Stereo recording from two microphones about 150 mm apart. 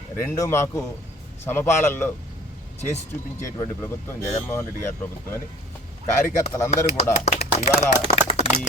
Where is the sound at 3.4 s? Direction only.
20° left (ahead or behind).